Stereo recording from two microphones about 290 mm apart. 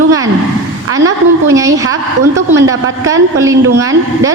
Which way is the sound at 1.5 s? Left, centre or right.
Centre.